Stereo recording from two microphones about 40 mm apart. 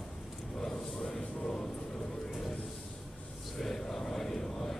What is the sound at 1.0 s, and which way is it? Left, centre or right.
Music, left.